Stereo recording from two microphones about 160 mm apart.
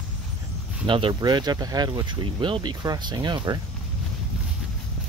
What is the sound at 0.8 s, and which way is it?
Speech, 30° right (ahead or behind).